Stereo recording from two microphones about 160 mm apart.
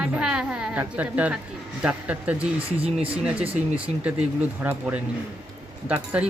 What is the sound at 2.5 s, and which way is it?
Speech, 35° right (ahead or behind).